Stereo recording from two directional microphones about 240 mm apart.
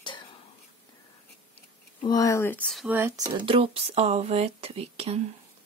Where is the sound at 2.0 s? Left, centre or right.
Centre; by 5.3 s right.